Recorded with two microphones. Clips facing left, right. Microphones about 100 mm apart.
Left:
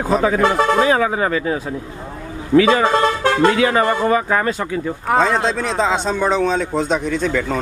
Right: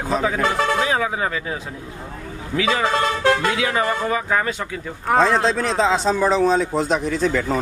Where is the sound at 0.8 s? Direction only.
50° left (ahead or behind).